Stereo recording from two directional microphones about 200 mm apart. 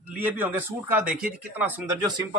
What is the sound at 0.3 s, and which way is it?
Speech, 10° right (ahead or behind).